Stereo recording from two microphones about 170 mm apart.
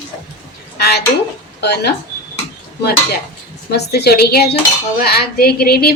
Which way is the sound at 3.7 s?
70° left (ahead or behind).